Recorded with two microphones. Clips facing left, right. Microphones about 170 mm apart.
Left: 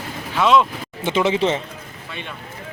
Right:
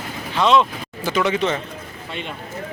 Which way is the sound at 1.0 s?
25° left (ahead or behind).